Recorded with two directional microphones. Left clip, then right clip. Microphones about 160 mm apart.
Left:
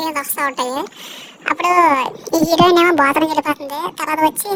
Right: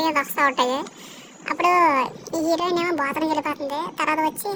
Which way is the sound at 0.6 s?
50° left (ahead or behind).